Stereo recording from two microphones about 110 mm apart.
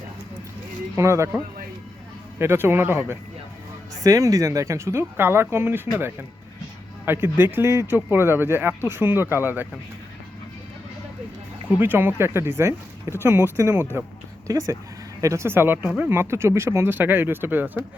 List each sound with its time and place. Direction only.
0.9 s speech: 25° right (ahead or behind)
2.4 s speech: 20° right (ahead or behind)
4.0 s speech: 30° right (ahead or behind)
11.8 s speech: 20° right (ahead or behind)